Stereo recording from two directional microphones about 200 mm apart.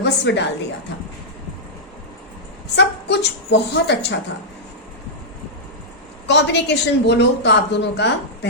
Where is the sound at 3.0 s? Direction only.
60° left (ahead or behind).